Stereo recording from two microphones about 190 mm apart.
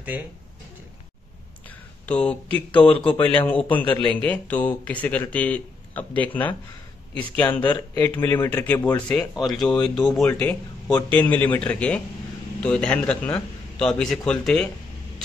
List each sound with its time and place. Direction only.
2.0 s speech: 5° left (ahead or behind)
2.7 s speech: 25° left (ahead or behind)
3.4 s a man's voice: 10° left (ahead or behind)